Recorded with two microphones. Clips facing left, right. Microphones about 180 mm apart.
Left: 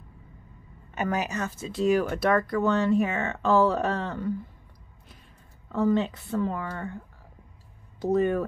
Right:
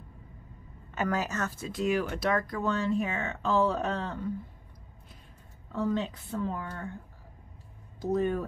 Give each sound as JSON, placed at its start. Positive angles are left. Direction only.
{"t": 0.9, "sound": "a woman's voice", "side_deg": 20}
{"t": 1.7, "sound": "speech", "side_deg": 35}
{"t": 5.7, "sound": "a woman's voice", "side_deg": 75}
{"t": 8.0, "sound": "speech", "side_deg": 75}